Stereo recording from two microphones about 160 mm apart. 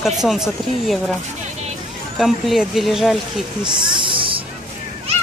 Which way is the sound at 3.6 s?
30° right (ahead or behind).